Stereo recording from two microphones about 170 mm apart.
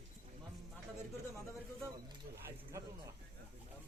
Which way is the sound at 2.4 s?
15° right (ahead or behind).